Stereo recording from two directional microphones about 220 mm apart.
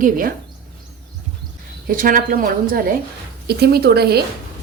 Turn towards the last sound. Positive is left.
turn(degrees=-45)  # may be behind; listen again after turning